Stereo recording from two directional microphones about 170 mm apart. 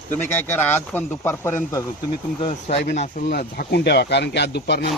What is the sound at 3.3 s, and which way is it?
Speech, 65° left (ahead or behind).